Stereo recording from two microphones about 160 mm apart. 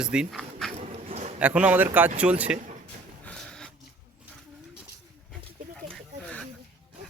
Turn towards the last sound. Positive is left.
turn(degrees=5)  # may be behind; listen again after turning